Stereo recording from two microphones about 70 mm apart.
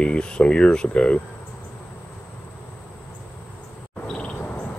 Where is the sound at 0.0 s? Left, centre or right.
Centre.